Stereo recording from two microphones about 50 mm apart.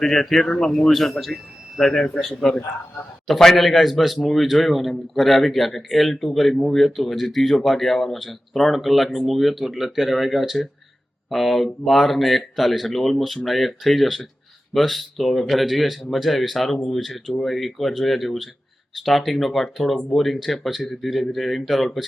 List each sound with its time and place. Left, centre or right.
0.0 s a man's voice: centre
0.4 s speech: centre
0.7 s a man's voice: centre